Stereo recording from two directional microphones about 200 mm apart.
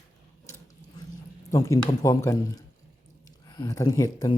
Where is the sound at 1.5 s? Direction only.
15° left (ahead or behind).